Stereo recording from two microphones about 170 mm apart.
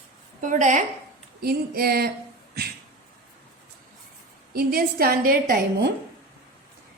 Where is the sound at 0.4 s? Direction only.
45° right (ahead or behind).